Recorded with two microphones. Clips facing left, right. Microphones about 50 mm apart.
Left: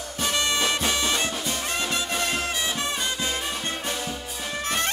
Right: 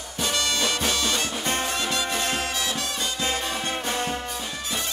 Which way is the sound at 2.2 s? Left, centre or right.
Right.